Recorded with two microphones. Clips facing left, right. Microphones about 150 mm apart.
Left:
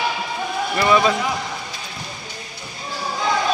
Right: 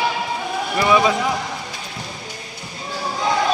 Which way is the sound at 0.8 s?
10° right (ahead or behind).